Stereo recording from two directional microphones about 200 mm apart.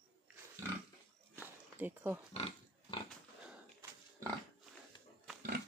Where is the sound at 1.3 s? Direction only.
10° right (ahead or behind).